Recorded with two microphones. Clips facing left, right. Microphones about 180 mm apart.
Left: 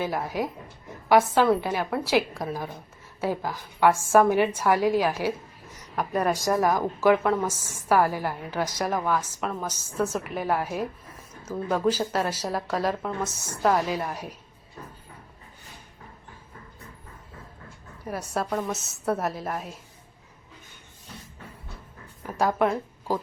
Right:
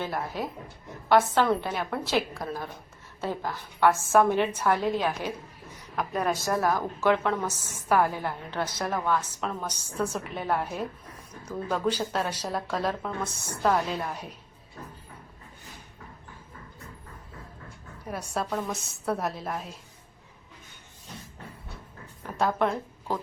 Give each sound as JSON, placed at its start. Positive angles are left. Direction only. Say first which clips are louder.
{"t": 0.0, "sound": "a woman's voice", "louder": "left 4 dB", "side_deg": 10}
{"t": 18.1, "sound": "a woman's voice", "louder": "left 2 dB", "side_deg": 5}
{"t": 22.4, "sound": "a woman's voice", "louder": "left 2 dB", "side_deg": 10}